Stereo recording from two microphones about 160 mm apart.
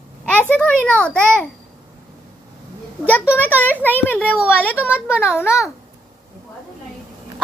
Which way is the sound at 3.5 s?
10° left (ahead or behind).